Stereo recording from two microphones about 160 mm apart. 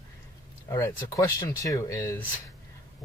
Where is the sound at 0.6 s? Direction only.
20° left (ahead or behind).